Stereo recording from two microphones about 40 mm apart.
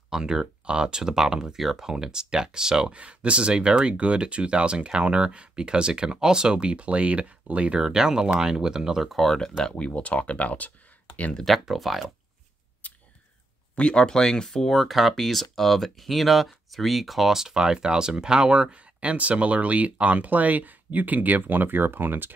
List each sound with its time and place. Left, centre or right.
0.2 s speech: centre
2.9 s speech: right
7.8 s speech: centre
9.2 s speech: centre
9.7 s speech: left
11.6 s speech: centre
12.8 s a sound: left
13.7 s speech: left
14.8 s speech: centre; by 22.3 s right